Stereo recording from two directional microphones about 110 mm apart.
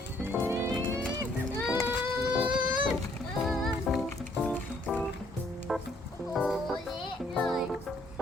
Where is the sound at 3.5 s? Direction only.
Centre (ahead or behind).